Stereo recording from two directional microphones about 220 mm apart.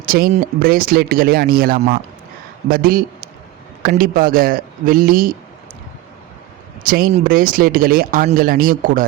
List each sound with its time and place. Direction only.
0.0 s speech: 45° right (ahead or behind)
6.8 s speech: 40° right (ahead or behind)